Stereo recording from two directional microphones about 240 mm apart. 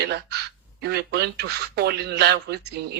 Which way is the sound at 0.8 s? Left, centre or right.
Right.